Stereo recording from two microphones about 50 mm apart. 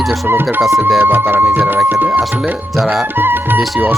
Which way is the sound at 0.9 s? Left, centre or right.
Right.